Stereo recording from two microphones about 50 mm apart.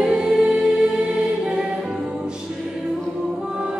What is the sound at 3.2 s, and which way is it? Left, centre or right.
Music, centre.